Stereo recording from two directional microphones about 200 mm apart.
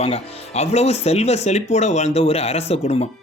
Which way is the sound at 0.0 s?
30° left (ahead or behind).